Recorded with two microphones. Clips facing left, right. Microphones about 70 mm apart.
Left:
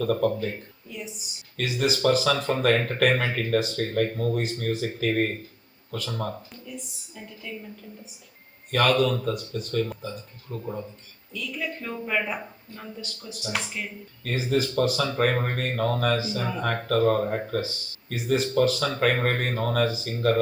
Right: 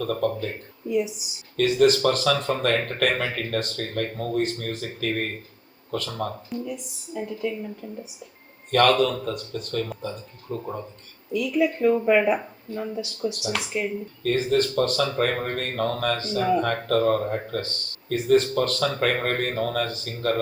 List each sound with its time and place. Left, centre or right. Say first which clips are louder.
0.0 s speech: left 1 dB; centre
0.9 s speech: right 14 dB; centre
1.5 s speech: right 8 dB; centre
8.7 s speech: right 3 dB; centre
11.3 s speech: right 10 dB; centre
14.3 s speech: right 4 dB; centre